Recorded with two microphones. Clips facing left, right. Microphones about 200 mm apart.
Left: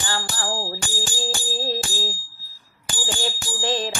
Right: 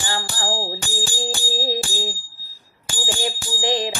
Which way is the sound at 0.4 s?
30° right (ahead or behind).